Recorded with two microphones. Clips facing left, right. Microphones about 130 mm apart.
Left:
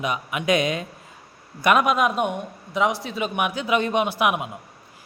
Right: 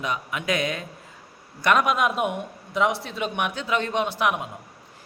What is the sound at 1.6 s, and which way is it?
Speech, 10° left (ahead or behind).